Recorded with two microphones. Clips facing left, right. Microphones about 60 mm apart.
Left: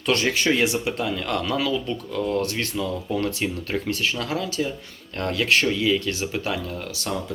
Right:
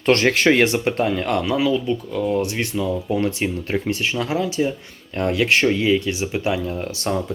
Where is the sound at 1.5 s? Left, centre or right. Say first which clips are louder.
Right 5 dB; centre.